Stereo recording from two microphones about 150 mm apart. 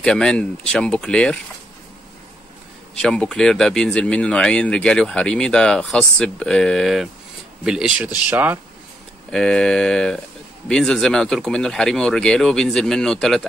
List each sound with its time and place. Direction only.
0.0 s speech: 5° left (ahead or behind)
3.0 s speech: 5° left (ahead or behind); by 8.5 s 10° right (ahead or behind)
9.3 s speech: 5° left (ahead or behind)